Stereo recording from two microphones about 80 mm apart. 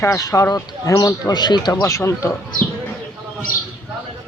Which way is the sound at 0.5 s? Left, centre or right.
Left.